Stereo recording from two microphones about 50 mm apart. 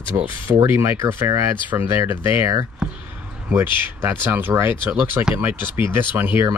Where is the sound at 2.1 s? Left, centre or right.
Right.